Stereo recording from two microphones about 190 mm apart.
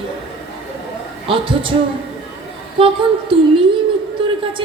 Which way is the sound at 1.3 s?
25° right (ahead or behind).